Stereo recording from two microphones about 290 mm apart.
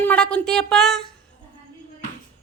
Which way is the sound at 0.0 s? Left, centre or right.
Centre.